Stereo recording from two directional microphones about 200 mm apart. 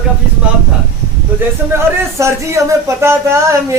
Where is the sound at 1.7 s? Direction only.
15° right (ahead or behind).